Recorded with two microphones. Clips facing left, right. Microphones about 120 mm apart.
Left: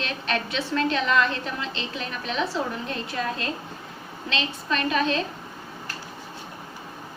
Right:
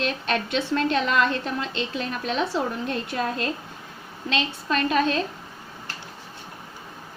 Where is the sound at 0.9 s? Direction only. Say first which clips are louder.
Right 1 dB; 40° right (ahead or behind).